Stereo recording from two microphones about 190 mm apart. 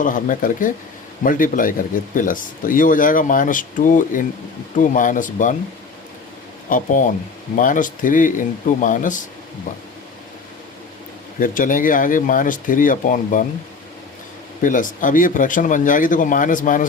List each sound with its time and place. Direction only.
0.0 s speech: 45° left (ahead or behind)
6.7 s speech: 45° left (ahead or behind)
11.3 s speech: 45° left (ahead or behind)
14.6 s speech: 45° left (ahead or behind)